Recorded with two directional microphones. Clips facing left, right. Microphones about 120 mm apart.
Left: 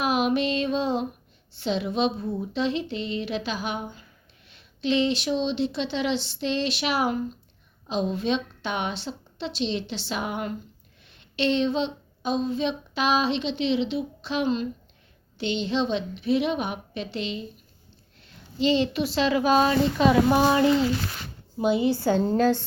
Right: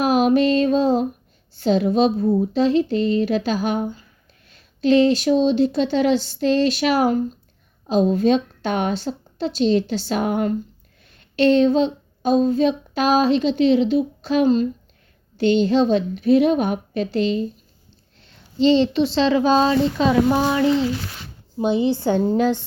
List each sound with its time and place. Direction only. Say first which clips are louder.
0.0 s music: right 7 dB; 40° right (ahead or behind)
1.5 s speech: right 8 dB; 40° right (ahead or behind)
18.2 s a woman's voice: right 7 dB; 30° right (ahead or behind)
20.1 s speech: even; 15° left (ahead or behind)
21.6 s a woman's voice: right 3 dB; 25° right (ahead or behind)